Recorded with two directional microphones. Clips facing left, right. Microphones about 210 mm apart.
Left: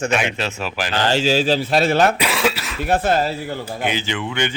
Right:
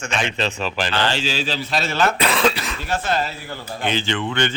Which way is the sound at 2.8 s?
55° left (ahead or behind).